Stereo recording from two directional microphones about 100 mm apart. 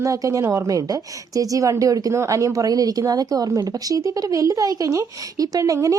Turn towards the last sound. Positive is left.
turn(degrees=-30)  # may be behind; listen again after turning